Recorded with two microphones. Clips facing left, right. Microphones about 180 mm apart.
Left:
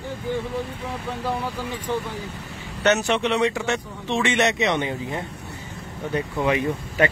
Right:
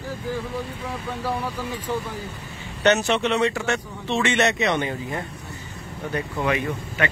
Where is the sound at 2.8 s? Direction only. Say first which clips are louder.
Right 1 dB; 10° left (ahead or behind).